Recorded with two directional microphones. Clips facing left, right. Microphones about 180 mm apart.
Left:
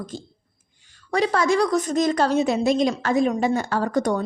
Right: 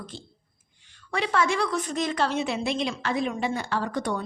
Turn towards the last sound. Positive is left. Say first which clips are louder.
# left 6 dB
turn(degrees=45)  # may be behind; listen again after turning